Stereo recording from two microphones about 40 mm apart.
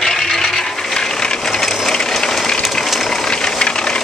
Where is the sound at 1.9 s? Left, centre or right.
Centre.